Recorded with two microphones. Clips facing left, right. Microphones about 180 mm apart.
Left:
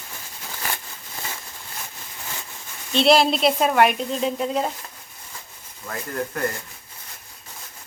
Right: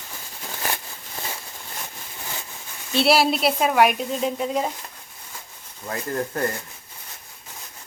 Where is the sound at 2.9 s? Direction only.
5° right (ahead or behind).